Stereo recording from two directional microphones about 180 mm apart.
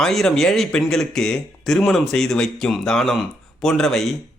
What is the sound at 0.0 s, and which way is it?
A man's voice, centre (ahead or behind).